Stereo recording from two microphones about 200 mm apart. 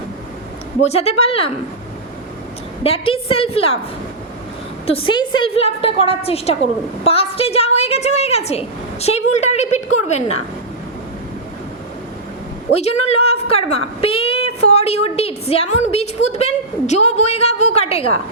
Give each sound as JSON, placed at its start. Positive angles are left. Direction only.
{"t": 0.8, "sound": "a woman's voice", "side_deg": 30}
{"t": 2.8, "sound": "a woman's voice", "side_deg": 30}
{"t": 4.9, "sound": "a woman's voice", "side_deg": 25}
{"t": 12.7, "sound": "a woman's voice", "side_deg": 35}